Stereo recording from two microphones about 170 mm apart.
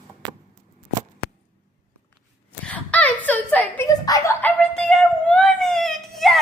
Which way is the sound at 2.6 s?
10° left (ahead or behind).